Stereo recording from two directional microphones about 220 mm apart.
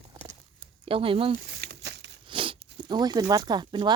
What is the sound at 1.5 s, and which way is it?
Crumpling, 45° right (ahead or behind).